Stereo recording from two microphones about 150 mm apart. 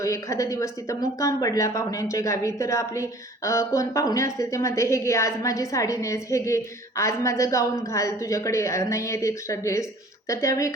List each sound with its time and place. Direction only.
0.0 s speech: 20° left (ahead or behind)